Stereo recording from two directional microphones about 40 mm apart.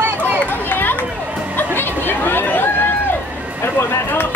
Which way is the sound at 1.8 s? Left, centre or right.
Left.